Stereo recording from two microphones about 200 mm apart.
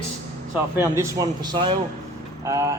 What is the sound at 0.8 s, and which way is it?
A man's voice, 15° right (ahead or behind).